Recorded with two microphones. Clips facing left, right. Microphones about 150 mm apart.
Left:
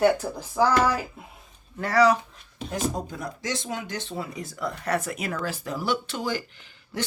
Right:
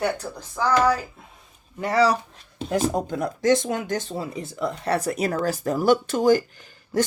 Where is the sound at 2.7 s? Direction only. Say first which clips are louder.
Right 6 dB; 60° right (ahead or behind); by 4.2 s 40° right (ahead or behind).